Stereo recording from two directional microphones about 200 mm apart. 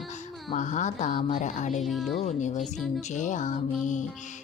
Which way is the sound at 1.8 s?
Centre (ahead or behind).